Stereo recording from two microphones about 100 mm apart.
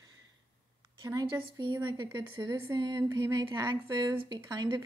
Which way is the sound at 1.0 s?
35° right (ahead or behind).